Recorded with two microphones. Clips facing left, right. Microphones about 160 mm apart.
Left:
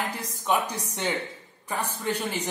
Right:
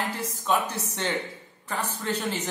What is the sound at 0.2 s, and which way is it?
A man's voice, 15° left (ahead or behind).